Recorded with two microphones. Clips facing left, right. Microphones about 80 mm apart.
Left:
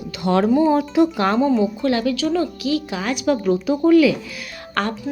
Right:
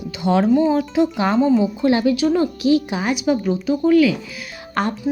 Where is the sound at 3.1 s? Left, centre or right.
Centre.